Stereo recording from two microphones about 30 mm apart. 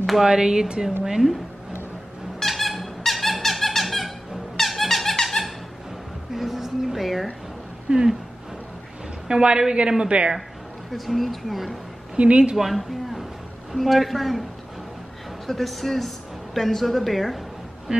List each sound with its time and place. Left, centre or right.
0.2 s a woman's voice: right
2.4 s squeak: centre
5.4 s squeak: left
6.3 s a sound: centre
7.9 s a woman's voice: right
9.3 s a woman's voice: right
10.9 s speech: centre
12.2 s a woman's voice: right
12.5 s a woman's voice: centre
15.4 s speech: centre